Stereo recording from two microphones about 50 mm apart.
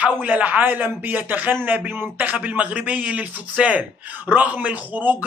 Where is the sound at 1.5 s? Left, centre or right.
Right.